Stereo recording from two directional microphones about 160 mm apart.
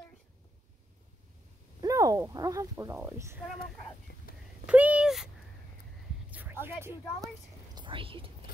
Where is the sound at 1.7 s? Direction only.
20° right (ahead or behind).